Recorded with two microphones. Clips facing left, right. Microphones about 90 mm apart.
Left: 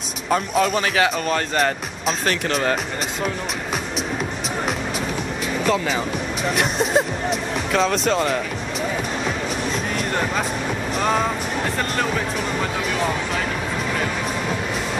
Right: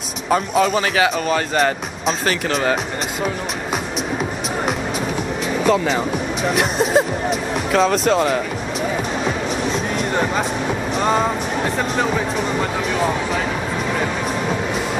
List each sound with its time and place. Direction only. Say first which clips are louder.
0.3 s speech: right 3 dB; centre (ahead or behind)
5.6 s speech: right 4 dB; centre (ahead or behind)
9.7 s a sound: right 3 dB; 5° right (ahead or behind)
11.0 s music: right 2 dB; 5° right (ahead or behind)
12.0 s speech: right 4 dB; 5° right (ahead or behind)